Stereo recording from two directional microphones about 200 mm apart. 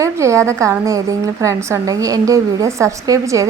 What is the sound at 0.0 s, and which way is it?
A woman's voice, 15° right (ahead or behind).